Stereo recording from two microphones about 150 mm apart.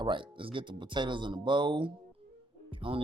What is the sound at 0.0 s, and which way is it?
Speech, 35° right (ahead or behind).